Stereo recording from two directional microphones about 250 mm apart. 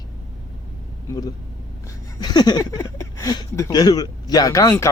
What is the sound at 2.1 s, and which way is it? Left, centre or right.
Speech, centre.